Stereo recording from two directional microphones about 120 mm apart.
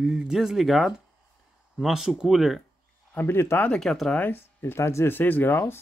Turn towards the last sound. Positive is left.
turn(degrees=20)  # may be behind; listen again after turning